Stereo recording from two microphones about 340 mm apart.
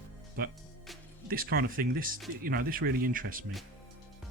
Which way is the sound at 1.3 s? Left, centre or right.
Right.